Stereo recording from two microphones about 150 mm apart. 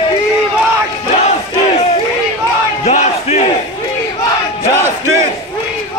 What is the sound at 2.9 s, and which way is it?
Battle cry, 50° left (ahead or behind).